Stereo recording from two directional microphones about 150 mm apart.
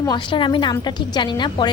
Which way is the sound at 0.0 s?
30° left (ahead or behind).